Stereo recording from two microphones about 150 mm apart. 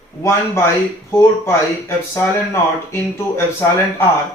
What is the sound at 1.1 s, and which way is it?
Speech, 15° left (ahead or behind).